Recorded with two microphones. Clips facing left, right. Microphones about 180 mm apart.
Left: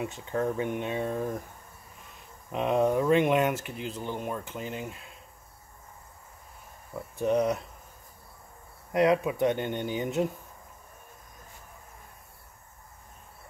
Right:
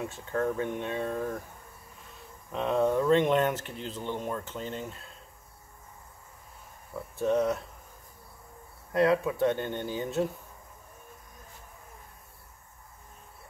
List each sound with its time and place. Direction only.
0.0 s speech: 15° left (ahead or behind)
2.5 s speech: 15° left (ahead or behind)
7.2 s speech: 15° left (ahead or behind)
8.9 s speech: 15° left (ahead or behind)